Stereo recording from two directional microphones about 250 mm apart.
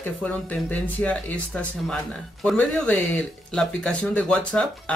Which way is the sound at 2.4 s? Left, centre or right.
Centre.